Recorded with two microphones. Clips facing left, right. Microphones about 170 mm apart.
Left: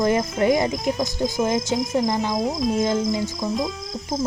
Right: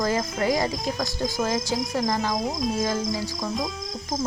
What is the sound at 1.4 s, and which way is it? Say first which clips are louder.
Speech: left 4 dB; 20° left (ahead or behind).